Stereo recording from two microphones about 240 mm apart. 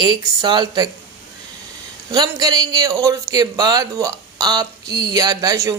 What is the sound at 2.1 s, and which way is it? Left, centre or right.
A man's voice, centre.